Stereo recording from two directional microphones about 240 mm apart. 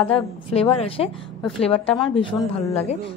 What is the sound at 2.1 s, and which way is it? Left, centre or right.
Speech, left.